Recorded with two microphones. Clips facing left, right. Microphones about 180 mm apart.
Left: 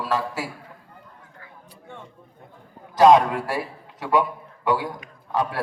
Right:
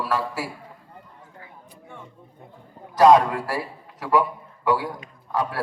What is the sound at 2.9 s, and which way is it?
A man's voice, 20° left (ahead or behind).